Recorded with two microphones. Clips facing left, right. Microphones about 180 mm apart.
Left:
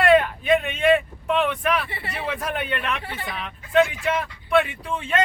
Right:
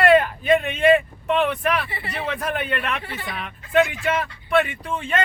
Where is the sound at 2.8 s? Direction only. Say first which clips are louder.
Even; 45° right (ahead or behind).